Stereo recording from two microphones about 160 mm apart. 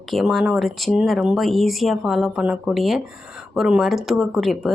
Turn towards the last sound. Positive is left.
turn(degrees=0)  # may be behind; listen again after turning